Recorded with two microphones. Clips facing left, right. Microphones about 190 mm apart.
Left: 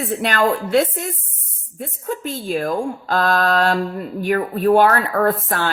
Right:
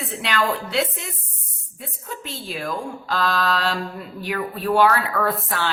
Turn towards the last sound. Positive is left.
turn(degrees=50)  # may be behind; listen again after turning